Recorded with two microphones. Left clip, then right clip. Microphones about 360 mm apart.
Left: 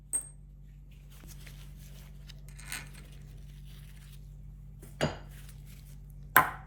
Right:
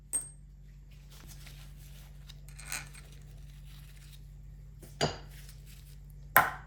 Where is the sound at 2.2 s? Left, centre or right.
Centre.